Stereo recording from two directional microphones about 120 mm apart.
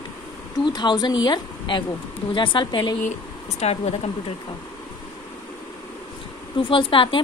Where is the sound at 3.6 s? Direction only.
65° left (ahead or behind).